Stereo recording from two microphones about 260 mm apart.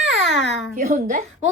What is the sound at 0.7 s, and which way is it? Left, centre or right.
Speech, right.